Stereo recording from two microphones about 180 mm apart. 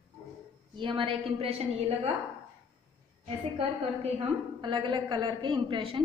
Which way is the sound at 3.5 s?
30° right (ahead or behind).